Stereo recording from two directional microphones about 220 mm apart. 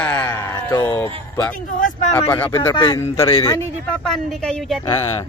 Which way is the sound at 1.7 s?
35° left (ahead or behind).